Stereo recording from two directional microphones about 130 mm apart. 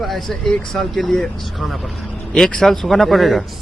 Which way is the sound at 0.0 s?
Centre (ahead or behind).